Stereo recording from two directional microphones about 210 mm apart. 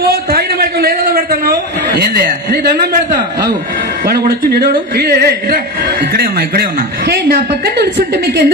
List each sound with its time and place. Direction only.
0.1 s a sound: 45° right (ahead or behind)
2.0 s a man's voice: 45° right (ahead or behind)
4.0 s a man's voice: 45° right (ahead or behind)